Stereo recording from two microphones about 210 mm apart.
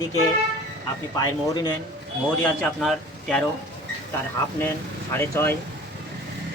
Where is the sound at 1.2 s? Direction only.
20° left (ahead or behind).